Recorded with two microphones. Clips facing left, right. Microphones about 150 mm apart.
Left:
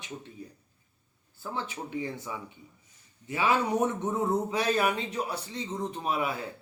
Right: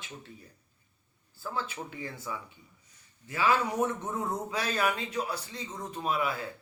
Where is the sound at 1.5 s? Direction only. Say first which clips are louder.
Left 3 dB; 20° left (ahead or behind).